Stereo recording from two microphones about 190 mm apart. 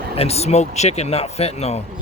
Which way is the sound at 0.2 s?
35° left (ahead or behind).